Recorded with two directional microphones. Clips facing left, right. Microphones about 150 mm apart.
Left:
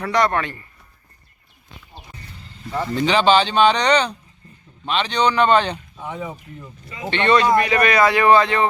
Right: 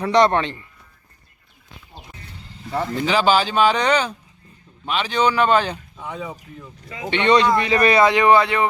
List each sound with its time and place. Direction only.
0.0 s speech: 25° right (ahead or behind)
2.9 s speech: 5° right (ahead or behind)
7.1 s speech: 15° right (ahead or behind)